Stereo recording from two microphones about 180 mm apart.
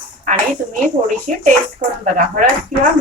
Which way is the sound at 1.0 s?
40° right (ahead or behind).